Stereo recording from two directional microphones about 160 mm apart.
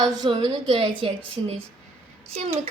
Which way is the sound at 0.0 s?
25° right (ahead or behind).